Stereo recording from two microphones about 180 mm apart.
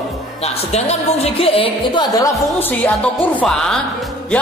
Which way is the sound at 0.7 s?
35° left (ahead or behind).